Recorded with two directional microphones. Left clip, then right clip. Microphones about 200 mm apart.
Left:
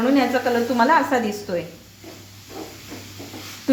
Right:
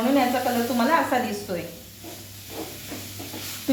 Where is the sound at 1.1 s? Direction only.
60° left (ahead or behind).